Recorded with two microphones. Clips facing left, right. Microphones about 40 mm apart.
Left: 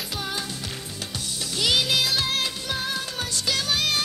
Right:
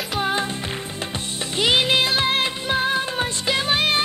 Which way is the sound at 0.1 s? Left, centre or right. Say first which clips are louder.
Right 10 dB; right.